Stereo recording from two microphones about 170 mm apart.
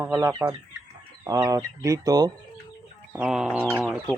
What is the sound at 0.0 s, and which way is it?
Speech, 15° right (ahead or behind).